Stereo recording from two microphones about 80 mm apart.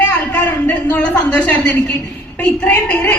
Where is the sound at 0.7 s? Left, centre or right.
Centre.